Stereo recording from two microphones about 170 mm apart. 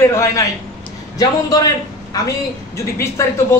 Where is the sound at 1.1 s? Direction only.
20° left (ahead or behind).